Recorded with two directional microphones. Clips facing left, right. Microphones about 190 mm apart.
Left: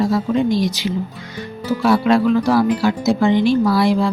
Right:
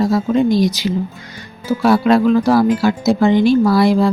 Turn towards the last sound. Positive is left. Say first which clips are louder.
# right 3 dB
turn(degrees=-45)  # may be behind; listen again after turning